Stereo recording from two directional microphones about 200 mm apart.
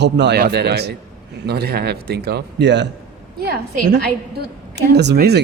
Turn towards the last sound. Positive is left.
turn(degrees=-50)  # may be behind; listen again after turning